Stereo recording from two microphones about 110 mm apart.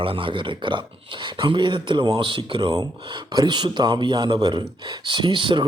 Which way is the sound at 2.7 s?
40° right (ahead or behind).